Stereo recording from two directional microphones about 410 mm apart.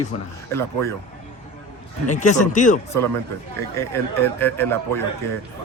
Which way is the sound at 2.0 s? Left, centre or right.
Centre.